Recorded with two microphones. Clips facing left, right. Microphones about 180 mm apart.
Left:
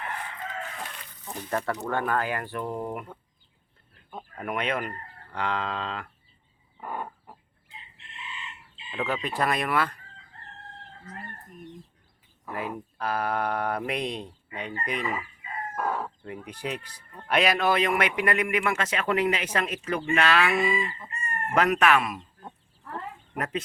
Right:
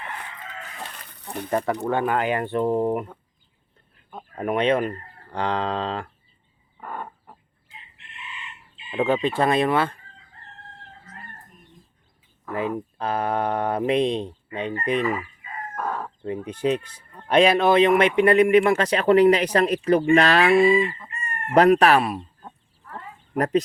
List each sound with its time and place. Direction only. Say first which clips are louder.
1.2 s speech: right 6 dB; 65° right (ahead or behind)
1.5 s speech: right 5 dB; 20° right (ahead or behind)
1.8 s fowl: right 5 dB; 15° right (ahead or behind)
4.4 s speech: right 9 dB; 30° right (ahead or behind)
6.7 s chicken: even; 10° left (ahead or behind)
8.9 s fowl: right 8 dB; 30° right (ahead or behind)
13.0 s fowl: right 3 dB; 25° right (ahead or behind)
15.7 s crowing: even; 10° left (ahead or behind)
16.2 s fowl: right 10 dB; 25° right (ahead or behind)
18.2 s speech: right 10 dB; 30° right (ahead or behind)
23.4 s speech: right 10 dB; 40° right (ahead or behind)